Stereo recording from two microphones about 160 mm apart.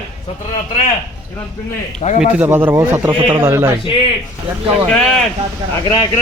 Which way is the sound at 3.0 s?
30° right (ahead or behind).